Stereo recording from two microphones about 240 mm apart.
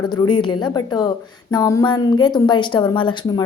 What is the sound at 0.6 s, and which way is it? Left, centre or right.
A woman's voice, centre.